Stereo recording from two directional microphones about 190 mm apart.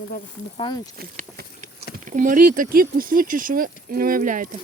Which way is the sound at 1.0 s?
50° right (ahead or behind).